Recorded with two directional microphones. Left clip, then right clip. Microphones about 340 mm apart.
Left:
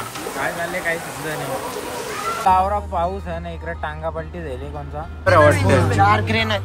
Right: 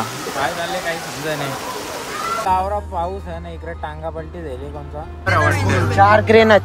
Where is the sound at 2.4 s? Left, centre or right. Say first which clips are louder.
Left 4 dB; centre.